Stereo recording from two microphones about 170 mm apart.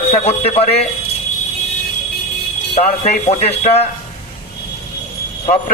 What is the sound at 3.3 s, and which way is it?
Speech, 40° left (ahead or behind).